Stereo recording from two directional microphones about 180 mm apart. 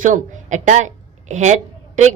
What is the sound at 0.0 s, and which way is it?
A woman's voice, 45° right (ahead or behind).